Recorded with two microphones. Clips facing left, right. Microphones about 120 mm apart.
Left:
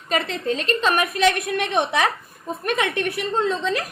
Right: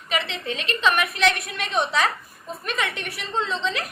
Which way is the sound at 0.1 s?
40° left (ahead or behind).